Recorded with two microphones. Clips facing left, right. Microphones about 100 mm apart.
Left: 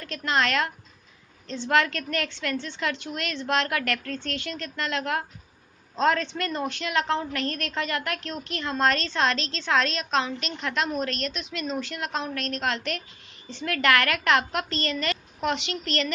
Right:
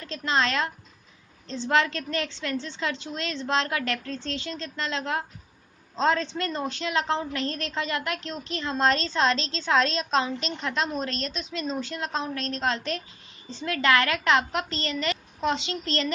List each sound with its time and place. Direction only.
0.0 s a woman's voice: 25° right (ahead or behind)